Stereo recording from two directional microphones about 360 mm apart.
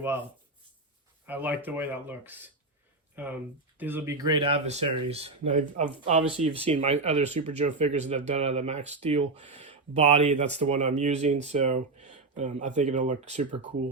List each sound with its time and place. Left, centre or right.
1.3 s speech: centre